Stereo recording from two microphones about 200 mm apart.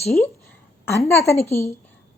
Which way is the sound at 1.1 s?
15° left (ahead or behind).